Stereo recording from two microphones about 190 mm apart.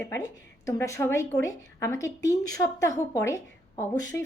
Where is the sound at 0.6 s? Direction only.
15° left (ahead or behind).